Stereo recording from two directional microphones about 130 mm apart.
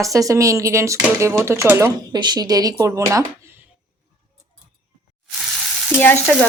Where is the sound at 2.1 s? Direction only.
35° right (ahead or behind).